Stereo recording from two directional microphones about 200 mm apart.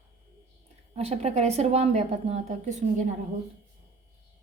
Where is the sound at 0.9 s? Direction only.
30° right (ahead or behind).